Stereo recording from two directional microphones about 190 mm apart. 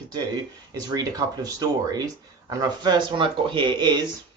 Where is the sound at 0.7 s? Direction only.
20° right (ahead or behind).